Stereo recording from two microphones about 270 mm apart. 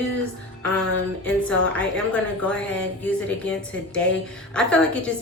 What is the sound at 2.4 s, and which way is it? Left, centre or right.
Speech, centre.